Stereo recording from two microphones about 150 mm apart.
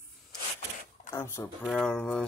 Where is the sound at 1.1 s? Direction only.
15° left (ahead or behind).